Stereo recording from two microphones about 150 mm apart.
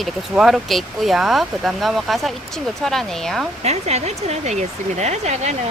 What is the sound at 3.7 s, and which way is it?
Speech, 45° right (ahead or behind).